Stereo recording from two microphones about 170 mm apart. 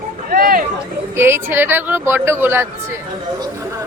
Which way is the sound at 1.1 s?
15° right (ahead or behind).